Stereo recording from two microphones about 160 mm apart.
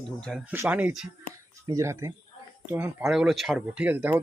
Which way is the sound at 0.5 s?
10° right (ahead or behind).